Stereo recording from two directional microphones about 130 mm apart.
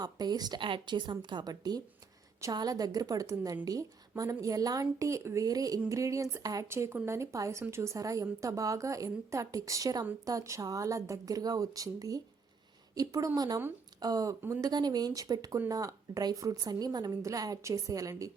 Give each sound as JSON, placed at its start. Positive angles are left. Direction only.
{"t": 0.0, "sound": "a woman's voice", "side_deg": -30}